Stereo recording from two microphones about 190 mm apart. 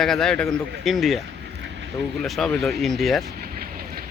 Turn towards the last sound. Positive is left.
turn(degrees=0)  # may be behind; listen again after turning